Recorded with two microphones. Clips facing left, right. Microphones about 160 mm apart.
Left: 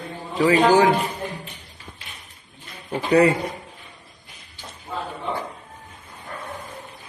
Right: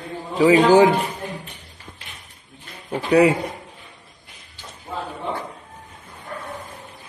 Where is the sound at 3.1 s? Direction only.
10° right (ahead or behind).